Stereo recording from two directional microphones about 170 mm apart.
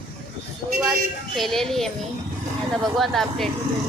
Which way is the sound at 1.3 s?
Centre (ahead or behind).